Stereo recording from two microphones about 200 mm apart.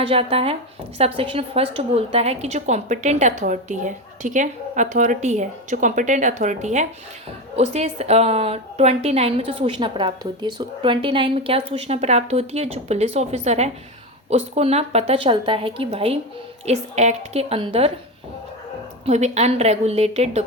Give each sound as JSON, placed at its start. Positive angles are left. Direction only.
{"t": 0.0, "sound": "a woman's voice", "side_deg": -25}
{"t": 19.0, "sound": "a woman's voice", "side_deg": -35}